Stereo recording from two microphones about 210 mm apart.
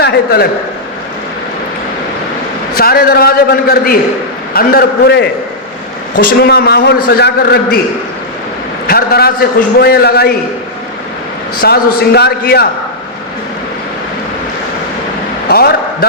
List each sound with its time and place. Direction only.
0.0 s a man's voice: 50° left (ahead or behind)
2.7 s a man's voice: 45° left (ahead or behind)
8.9 s a man's voice: 45° left (ahead or behind)
11.6 s a man's voice: 50° left (ahead or behind)
15.4 s a man's voice: 45° left (ahead or behind)